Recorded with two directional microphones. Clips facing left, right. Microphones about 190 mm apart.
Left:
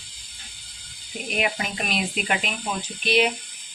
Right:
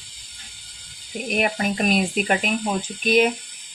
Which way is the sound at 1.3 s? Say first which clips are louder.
Right 4 dB; 45° right (ahead or behind).